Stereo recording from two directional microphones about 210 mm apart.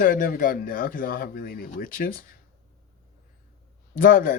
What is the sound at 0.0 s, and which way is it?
Speech, 40° left (ahead or behind).